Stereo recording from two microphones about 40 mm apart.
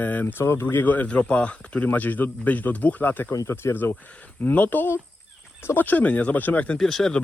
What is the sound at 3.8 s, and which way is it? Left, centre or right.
Speech, left.